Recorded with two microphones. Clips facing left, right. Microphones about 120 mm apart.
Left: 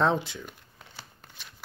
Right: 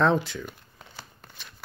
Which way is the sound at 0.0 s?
20° left (ahead or behind).